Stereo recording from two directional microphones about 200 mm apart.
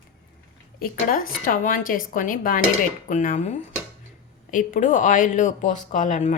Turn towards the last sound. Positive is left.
turn(degrees=40)  # may be behind; listen again after turning